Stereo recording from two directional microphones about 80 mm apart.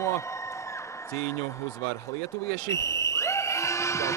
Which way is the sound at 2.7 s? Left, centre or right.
Left.